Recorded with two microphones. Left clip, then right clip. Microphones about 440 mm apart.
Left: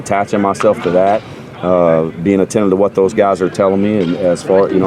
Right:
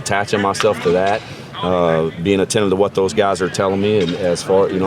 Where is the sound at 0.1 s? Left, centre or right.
Right.